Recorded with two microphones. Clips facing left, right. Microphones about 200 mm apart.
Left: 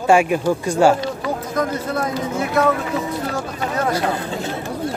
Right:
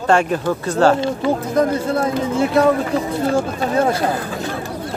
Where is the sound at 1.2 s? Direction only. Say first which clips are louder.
Right 6 dB; 30° right (ahead or behind).